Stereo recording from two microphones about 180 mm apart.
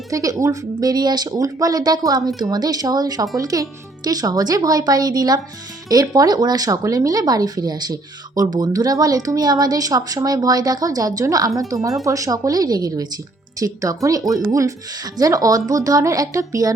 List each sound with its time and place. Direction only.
0.1 s speech: 20° right (ahead or behind)
14.2 s speech: centre (ahead or behind)
15.2 s speech: 20° right (ahead or behind)